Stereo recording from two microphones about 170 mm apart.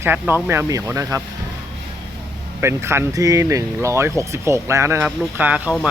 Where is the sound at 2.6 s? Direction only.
15° right (ahead or behind).